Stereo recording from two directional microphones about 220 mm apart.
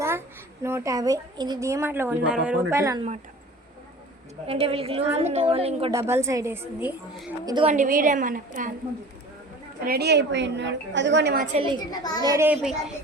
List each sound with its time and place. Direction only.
0.0 s a child's voice: 10° right (ahead or behind)
4.4 s a woman's voice: 25° right (ahead or behind)
5.9 s a woman's voice: 10° right (ahead or behind)
7.4 s a woman's voice: 20° right (ahead or behind)
7.7 s a woman's voice: 35° right (ahead or behind)
9.8 s a woman's voice: 45° right (ahead or behind)
11.5 s a woman's voice: 20° right (ahead or behind)
11.9 s a child's voice: 20° left (ahead or behind)
12.2 s a woman's voice: 15° right (ahead or behind)